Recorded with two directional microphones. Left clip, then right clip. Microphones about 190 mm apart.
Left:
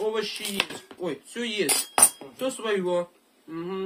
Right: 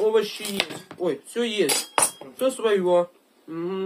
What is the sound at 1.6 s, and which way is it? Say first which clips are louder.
Speech: right 1 dB; 15° left (ahead or behind).